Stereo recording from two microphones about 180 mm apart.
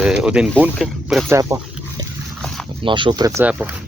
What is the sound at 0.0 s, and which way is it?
Speech, 5° right (ahead or behind).